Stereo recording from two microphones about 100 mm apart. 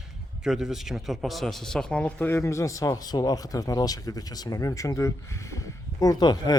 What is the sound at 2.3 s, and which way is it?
Speech, 25° left (ahead or behind).